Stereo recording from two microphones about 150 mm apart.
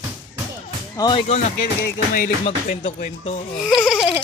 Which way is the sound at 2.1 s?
65° left (ahead or behind).